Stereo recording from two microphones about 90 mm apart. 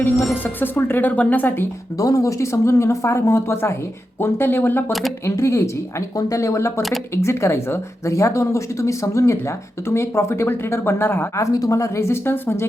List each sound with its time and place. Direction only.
0.4 s speech: 20° left (ahead or behind)
2.0 s speech: 40° left (ahead or behind)
4.9 s speech: centre (ahead or behind)
5.2 s speech: 30° left (ahead or behind)
11.5 s speech: 40° left (ahead or behind)